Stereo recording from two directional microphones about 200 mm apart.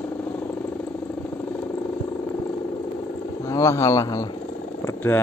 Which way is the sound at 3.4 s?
15° left (ahead or behind).